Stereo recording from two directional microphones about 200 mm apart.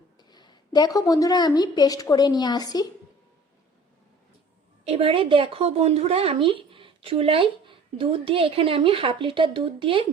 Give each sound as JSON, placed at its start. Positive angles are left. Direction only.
{"t": 0.2, "sound": "a woman's voice", "side_deg": 20}
{"t": 4.9, "sound": "speech", "side_deg": -30}